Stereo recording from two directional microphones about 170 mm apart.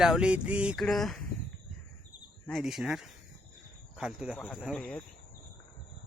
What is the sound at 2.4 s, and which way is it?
Speech, centre (ahead or behind).